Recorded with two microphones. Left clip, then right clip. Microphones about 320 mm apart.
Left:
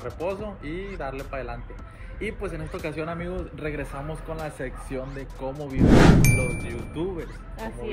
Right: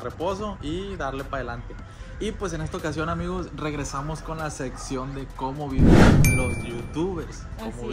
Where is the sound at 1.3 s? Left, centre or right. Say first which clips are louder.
Right 3 dB; centre.